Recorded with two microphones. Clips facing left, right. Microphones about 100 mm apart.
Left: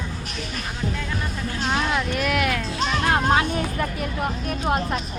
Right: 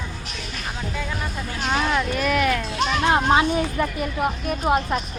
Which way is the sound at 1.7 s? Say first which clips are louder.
Right 2 dB; centre (ahead or behind).